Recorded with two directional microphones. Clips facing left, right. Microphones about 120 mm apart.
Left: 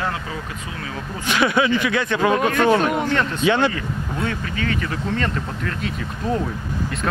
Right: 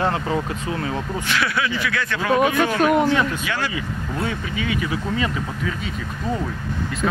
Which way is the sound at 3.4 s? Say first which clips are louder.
Left 8 dB; 25° left (ahead or behind).